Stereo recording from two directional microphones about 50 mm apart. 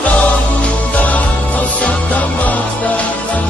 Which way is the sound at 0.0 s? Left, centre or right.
Left.